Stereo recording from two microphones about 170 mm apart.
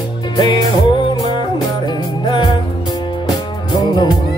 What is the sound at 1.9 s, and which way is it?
Music, 25° left (ahead or behind).